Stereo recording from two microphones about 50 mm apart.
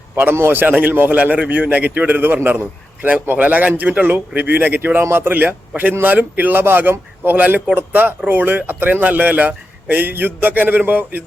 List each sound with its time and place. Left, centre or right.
0.3 s a man's voice: right
7.3 s a man's voice: right